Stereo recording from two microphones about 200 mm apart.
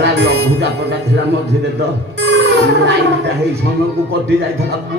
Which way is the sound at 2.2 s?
55° right (ahead or behind).